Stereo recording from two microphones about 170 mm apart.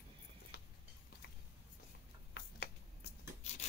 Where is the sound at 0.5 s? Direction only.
70° left (ahead or behind).